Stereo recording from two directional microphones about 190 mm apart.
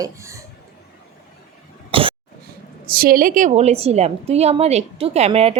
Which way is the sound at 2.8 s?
50° right (ahead or behind).